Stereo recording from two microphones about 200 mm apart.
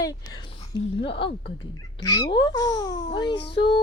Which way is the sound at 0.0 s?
20° left (ahead or behind).